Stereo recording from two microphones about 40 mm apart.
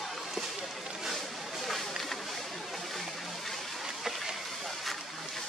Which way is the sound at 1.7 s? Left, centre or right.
Centre.